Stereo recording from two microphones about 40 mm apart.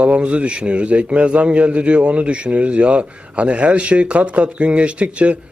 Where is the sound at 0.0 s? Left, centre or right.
Right.